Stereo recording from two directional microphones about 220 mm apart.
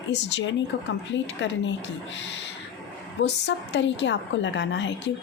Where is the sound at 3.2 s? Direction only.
50° left (ahead or behind).